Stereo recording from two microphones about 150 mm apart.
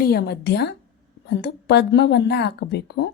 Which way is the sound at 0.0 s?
90° left.